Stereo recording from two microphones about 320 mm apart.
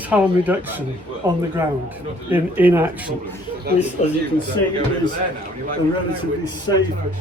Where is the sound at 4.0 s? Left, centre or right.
Left.